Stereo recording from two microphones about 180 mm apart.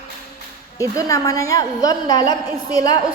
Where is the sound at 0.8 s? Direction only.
20° left (ahead or behind).